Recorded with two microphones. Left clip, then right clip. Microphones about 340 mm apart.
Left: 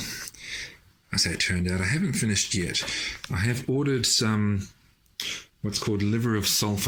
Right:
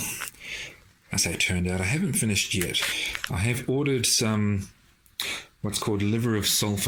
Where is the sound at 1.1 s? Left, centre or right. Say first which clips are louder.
Even; centre.